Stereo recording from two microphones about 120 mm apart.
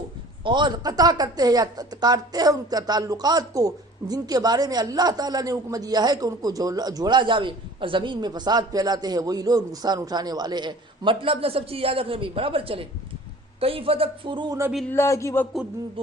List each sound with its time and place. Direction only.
0.4 s a man's voice: 40° right (ahead or behind)
14.8 s a man's voice: 20° left (ahead or behind)